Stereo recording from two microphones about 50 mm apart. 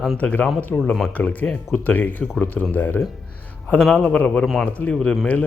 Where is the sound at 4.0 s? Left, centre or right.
Left.